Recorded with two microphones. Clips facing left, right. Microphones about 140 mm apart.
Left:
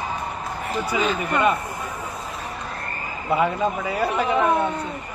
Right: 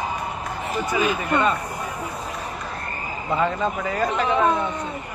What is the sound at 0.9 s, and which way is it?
Speech, 10° right (ahead or behind).